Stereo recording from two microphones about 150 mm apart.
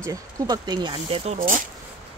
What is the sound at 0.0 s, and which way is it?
Speech, 25° right (ahead or behind).